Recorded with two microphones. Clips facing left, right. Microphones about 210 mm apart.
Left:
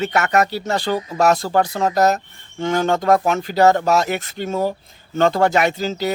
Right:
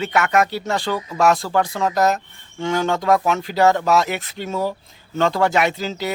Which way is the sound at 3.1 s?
45° left (ahead or behind).